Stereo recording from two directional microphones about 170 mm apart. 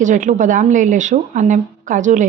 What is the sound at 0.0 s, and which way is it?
A woman's voice, 50° right (ahead or behind).